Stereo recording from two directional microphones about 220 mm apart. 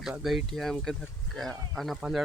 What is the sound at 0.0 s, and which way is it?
Speech, centre (ahead or behind).